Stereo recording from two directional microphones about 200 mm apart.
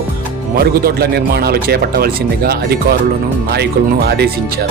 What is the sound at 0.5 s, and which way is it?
Speech, 50° right (ahead or behind).